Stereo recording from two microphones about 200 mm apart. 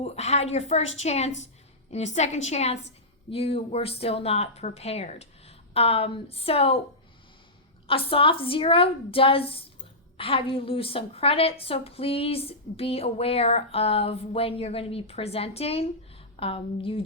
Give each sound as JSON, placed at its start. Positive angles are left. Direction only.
{"t": 0.0, "sound": "a woman's voice", "side_deg": 30}
{"t": 7.9, "sound": "a woman's voice", "side_deg": 25}